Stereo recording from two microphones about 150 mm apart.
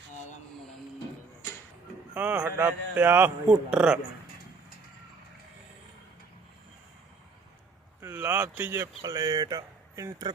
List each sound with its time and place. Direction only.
2.1 s speech: 10° right (ahead or behind)
8.0 s a sound: 15° right (ahead or behind)
9.0 s speech: 25° right (ahead or behind)